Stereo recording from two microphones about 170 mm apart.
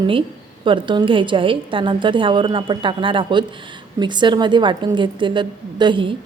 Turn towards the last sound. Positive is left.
turn(degrees=-30)  # may be behind; listen again after turning